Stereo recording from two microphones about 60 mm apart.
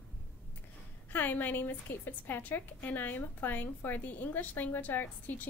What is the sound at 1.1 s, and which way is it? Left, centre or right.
A woman's voice, left.